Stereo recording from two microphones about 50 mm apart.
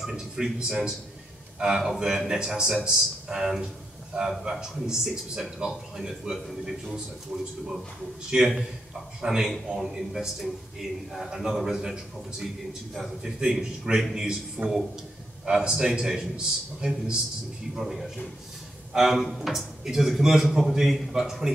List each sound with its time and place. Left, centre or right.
0.0 s a man's voice: centre
2.0 s a man's voice: centre
8.3 s a man's voice: right
17.7 s a man's voice: centre